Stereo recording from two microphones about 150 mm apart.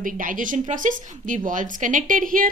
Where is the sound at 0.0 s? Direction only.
65° right (ahead or behind).